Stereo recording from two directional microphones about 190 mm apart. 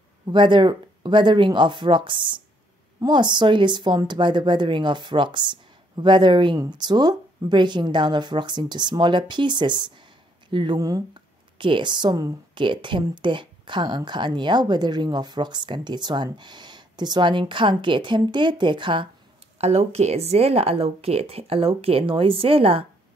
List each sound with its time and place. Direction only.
0.3 s speech: 25° right (ahead or behind)